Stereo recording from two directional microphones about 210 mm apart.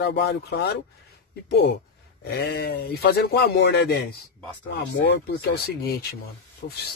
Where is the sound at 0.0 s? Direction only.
55° left (ahead or behind).